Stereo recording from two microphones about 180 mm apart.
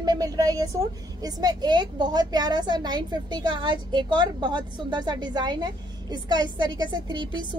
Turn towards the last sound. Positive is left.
turn(degrees=-25)  # may be behind; listen again after turning